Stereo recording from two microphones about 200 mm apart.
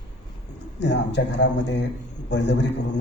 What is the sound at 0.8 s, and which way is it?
A man's voice, 60° left (ahead or behind).